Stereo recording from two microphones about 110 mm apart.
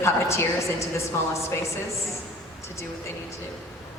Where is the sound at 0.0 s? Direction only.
25° left (ahead or behind).